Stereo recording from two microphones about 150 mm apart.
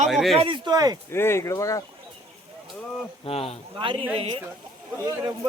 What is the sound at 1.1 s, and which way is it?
Speech, 15° left (ahead or behind).